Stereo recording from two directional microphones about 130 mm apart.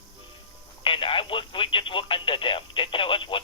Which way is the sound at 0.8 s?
40° left (ahead or behind).